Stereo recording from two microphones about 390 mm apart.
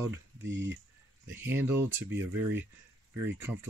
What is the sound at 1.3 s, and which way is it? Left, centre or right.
Speech, centre.